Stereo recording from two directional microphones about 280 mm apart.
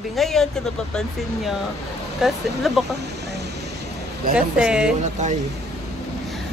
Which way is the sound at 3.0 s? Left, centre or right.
Right.